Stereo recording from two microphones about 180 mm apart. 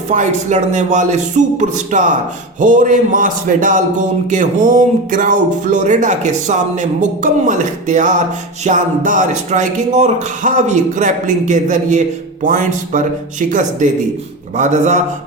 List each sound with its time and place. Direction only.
0.1 s a man's voice: 40° right (ahead or behind)